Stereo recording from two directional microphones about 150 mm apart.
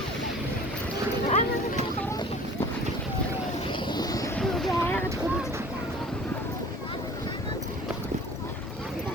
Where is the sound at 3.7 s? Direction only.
30° left (ahead or behind).